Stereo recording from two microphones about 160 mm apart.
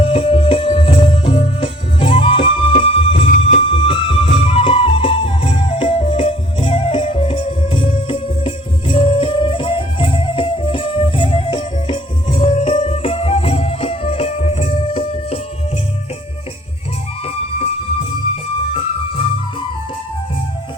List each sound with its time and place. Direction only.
0.0 s music: 35° left (ahead or behind)
3.2 s music: 55° left (ahead or behind)
3.6 s music: 30° left (ahead or behind)
18.7 s music: 35° left (ahead or behind)